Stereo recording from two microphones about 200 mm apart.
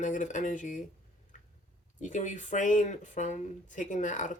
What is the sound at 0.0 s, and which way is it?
Speech, 40° left (ahead or behind).